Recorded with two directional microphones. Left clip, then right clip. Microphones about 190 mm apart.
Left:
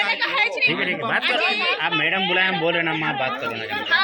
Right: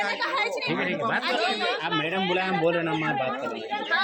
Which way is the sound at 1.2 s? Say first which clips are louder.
Left 5 dB; 40° right (ahead or behind).